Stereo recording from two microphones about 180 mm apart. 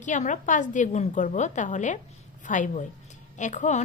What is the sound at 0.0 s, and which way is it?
A woman's voice, 45° left (ahead or behind).